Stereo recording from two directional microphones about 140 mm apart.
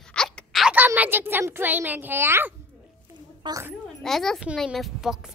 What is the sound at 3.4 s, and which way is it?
Speech, 35° right (ahead or behind).